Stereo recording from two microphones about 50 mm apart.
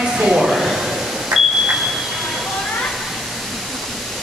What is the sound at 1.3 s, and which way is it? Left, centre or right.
Smoke detector, centre.